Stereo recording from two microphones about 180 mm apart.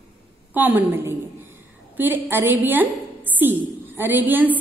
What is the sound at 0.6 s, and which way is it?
A woman's voice, 10° right (ahead or behind).